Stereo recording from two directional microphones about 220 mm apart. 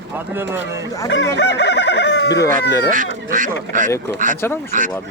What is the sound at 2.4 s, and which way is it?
Speech, 10° left (ahead or behind).